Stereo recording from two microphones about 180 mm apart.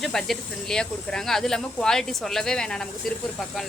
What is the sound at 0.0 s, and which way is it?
Speech, centre (ahead or behind).